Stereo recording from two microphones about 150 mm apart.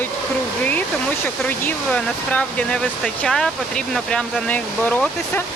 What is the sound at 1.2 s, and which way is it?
Speech, 10° left (ahead or behind).